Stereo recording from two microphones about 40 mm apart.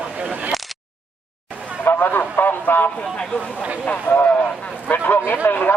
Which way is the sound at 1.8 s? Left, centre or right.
Left.